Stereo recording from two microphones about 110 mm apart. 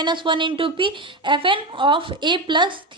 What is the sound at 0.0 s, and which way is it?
Speech, 45° right (ahead or behind).